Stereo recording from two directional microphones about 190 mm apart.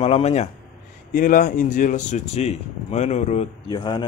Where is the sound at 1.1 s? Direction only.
45° left (ahead or behind).